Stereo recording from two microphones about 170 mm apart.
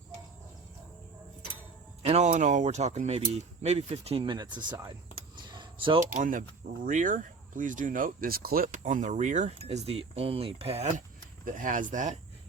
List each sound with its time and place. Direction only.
2.0 s speech: 40° right (ahead or behind)
5.5 s keys jangling: 30° right (ahead or behind)
6.1 s speech: 50° right (ahead or behind)
11.4 s speech: 50° right (ahead or behind)